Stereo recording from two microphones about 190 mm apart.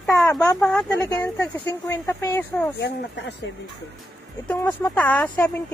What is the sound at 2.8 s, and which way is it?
Speech, 65° left (ahead or behind).